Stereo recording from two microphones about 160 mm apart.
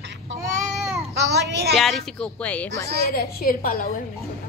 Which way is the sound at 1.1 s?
90° right.